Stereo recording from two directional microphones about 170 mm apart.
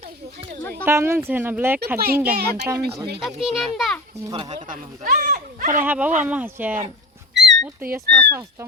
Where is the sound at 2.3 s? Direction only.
75° right (ahead or behind).